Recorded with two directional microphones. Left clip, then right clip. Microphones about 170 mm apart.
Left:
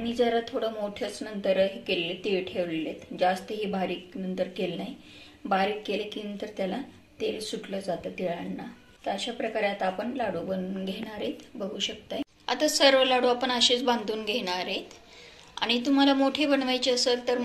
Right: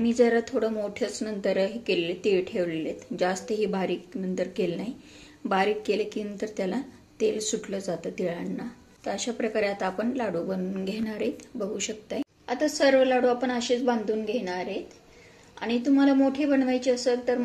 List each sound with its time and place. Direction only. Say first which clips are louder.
0.0 s a woman's voice: right 3 dB; 65° right (ahead or behind)